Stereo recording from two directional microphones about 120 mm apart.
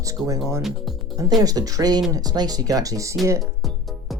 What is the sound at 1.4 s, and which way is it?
Speech, 30° right (ahead or behind).